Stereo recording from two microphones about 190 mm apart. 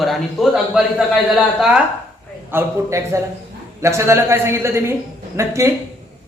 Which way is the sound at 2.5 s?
15° right (ahead or behind).